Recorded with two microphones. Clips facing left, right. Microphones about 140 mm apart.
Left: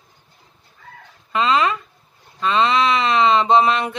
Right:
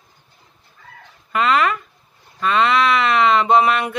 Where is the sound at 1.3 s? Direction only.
25° left (ahead or behind).